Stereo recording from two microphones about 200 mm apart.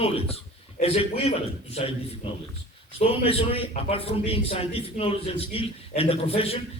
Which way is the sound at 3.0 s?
30° left (ahead or behind).